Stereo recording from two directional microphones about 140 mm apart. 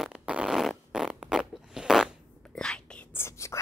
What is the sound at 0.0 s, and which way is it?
Fart, 5° right (ahead or behind).